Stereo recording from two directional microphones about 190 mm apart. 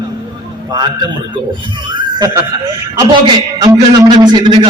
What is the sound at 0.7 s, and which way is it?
Speech, 20° right (ahead or behind).